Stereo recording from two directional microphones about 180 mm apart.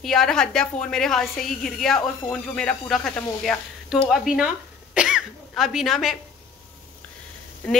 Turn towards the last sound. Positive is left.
turn(degrees=5)  # may be behind; listen again after turning